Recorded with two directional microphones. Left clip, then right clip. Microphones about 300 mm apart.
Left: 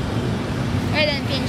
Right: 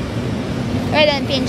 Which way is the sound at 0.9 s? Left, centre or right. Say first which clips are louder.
Right 7 dB; centre.